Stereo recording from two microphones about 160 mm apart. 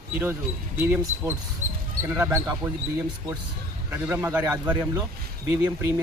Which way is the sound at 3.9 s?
10° right (ahead or behind).